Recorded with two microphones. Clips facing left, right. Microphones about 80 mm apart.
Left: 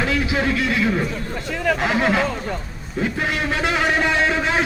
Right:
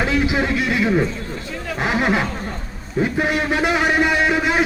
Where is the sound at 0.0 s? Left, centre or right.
Right.